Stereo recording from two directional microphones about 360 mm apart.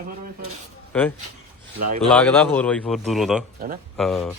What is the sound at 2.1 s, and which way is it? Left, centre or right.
A man's voice, centre.